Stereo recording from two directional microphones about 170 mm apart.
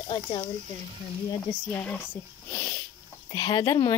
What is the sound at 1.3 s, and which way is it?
Speech, 15° left (ahead or behind).